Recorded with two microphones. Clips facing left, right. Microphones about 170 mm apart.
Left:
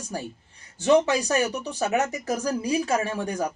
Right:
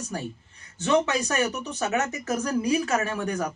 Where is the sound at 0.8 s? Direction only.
35° left (ahead or behind).